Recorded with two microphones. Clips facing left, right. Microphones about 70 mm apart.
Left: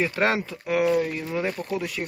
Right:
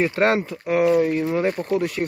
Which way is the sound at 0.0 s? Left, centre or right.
Right.